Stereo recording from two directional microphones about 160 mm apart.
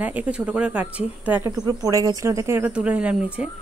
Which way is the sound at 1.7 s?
20° right (ahead or behind).